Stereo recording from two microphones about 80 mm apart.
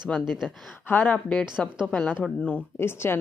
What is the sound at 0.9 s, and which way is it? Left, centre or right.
A woman's voice, left.